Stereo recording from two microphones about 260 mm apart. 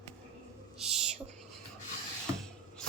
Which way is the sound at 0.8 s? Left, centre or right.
Centre.